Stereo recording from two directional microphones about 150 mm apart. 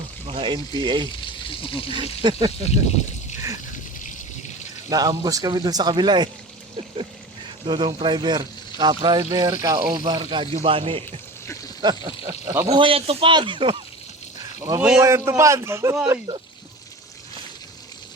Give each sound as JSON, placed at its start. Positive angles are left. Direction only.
{"t": 0.3, "sound": "speech", "side_deg": -35}
{"t": 1.5, "sound": "speech", "side_deg": 35}
{"t": 2.0, "sound": "speech", "side_deg": -35}
{"t": 2.6, "sound": "speech", "side_deg": 45}
{"t": 4.9, "sound": "speech", "side_deg": -25}
{"t": 7.6, "sound": "speech", "side_deg": -35}
{"t": 12.7, "sound": "speech", "side_deg": -35}
{"t": 14.6, "sound": "speech", "side_deg": -20}